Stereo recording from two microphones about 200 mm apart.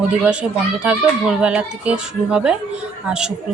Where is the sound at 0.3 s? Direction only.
5° right (ahead or behind).